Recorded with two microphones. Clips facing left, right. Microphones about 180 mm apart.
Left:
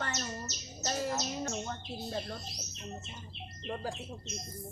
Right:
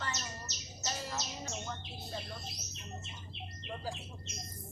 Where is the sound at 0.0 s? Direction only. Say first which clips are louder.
Left 4 dB; 50° left (ahead or behind).